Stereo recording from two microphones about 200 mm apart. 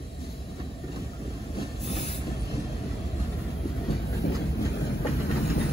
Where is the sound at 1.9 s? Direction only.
35° left (ahead or behind).